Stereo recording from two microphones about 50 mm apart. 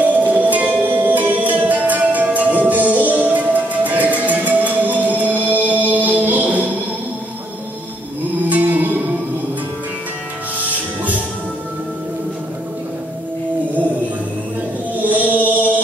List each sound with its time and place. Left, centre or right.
0.0 s music: right
8.5 s music: right
15.0 s music: right